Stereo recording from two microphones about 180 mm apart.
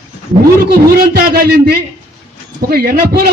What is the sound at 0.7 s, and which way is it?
A man's voice, 60° right (ahead or behind).